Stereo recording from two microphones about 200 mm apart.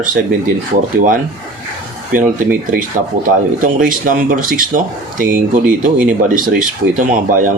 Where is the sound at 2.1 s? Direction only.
40° right (ahead or behind).